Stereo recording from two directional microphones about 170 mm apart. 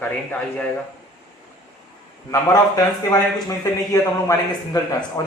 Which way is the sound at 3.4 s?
20° left (ahead or behind).